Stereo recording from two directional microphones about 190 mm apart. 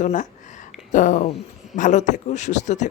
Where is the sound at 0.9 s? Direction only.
45° left (ahead or behind).